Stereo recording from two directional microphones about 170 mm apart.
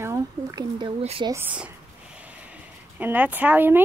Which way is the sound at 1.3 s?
10° right (ahead or behind).